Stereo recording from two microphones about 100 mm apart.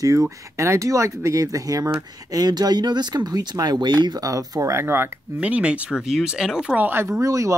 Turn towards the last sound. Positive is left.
turn(degrees=-35)  # may be behind; listen again after turning